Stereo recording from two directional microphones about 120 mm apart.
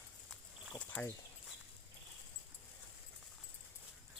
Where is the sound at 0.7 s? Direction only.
10° left (ahead or behind).